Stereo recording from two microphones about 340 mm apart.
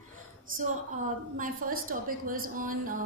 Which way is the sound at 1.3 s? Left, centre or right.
Right.